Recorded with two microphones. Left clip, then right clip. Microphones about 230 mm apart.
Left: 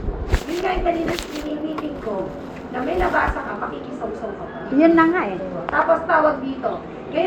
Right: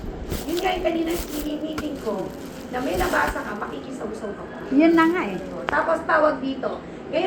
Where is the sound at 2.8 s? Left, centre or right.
Right.